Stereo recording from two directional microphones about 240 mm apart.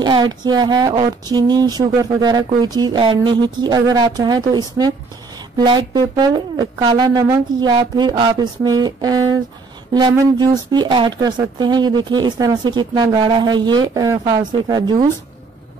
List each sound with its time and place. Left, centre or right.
0.0 s speech: centre